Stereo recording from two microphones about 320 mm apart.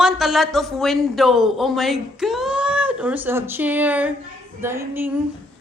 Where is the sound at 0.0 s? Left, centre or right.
Centre.